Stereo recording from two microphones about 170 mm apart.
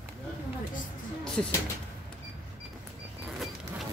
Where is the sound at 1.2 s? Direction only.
5° left (ahead or behind).